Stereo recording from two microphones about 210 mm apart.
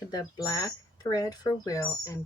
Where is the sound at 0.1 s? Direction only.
15° left (ahead or behind).